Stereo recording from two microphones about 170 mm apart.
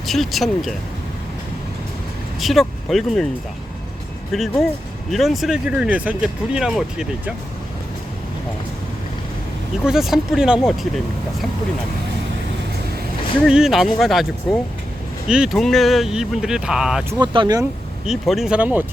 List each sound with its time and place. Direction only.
0.0 s speech: centre (ahead or behind)
2.4 s speech: centre (ahead or behind)
4.3 s speech: centre (ahead or behind)
9.8 s speech: centre (ahead or behind)
13.5 s speech: 5° right (ahead or behind)
17.2 s speech: 25° right (ahead or behind)
18.0 s speech: centre (ahead or behind)